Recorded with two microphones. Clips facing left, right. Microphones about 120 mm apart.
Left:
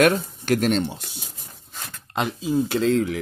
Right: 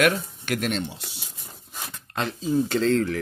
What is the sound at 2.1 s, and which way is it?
Speech, 10° left (ahead or behind).